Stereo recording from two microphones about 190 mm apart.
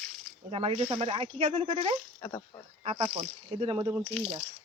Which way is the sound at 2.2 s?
15° left (ahead or behind).